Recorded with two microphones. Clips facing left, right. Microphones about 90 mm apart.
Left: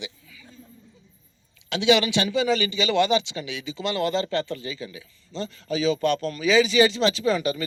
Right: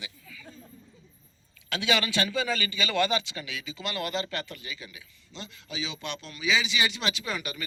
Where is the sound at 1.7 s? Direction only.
25° left (ahead or behind).